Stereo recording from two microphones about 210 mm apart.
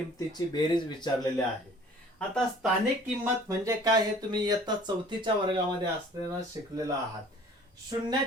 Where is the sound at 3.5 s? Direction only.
15° right (ahead or behind).